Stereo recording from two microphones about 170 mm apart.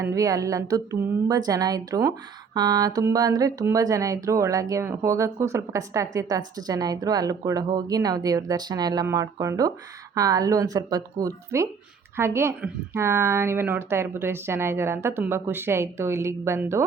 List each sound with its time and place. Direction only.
0.0 s speech: 20° right (ahead or behind)